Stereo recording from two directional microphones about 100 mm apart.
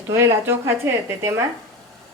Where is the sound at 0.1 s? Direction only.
30° right (ahead or behind).